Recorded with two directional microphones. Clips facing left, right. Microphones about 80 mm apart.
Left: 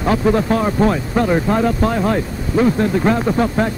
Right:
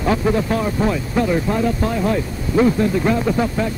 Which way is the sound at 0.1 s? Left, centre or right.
Left.